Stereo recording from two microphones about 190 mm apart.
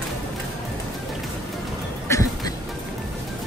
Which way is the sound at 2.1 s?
20° left (ahead or behind).